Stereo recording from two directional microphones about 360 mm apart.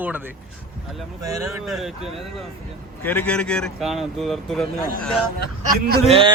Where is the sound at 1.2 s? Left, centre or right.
Centre.